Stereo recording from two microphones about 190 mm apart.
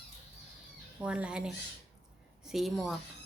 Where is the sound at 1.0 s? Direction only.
5° right (ahead or behind).